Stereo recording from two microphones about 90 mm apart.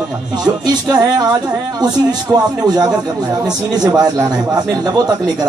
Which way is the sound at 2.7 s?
50° right (ahead or behind).